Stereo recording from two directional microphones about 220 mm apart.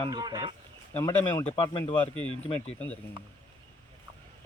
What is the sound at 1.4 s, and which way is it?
Speech, 25° left (ahead or behind).